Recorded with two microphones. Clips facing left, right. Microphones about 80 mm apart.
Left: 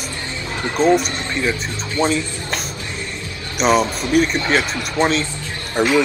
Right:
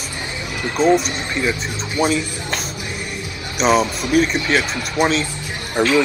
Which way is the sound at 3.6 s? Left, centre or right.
Centre.